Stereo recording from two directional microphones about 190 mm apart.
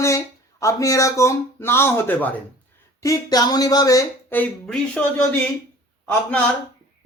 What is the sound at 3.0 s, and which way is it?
Speech, 20° left (ahead or behind).